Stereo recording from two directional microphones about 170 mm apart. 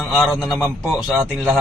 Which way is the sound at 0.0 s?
Centre (ahead or behind).